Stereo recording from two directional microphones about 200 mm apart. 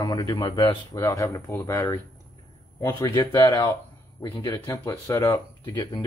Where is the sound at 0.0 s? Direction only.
20° left (ahead or behind).